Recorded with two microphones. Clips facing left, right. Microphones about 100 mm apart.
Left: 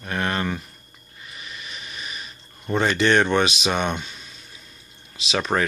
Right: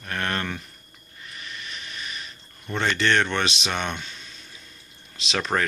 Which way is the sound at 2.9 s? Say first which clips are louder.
Left 4 dB; 15° left (ahead or behind).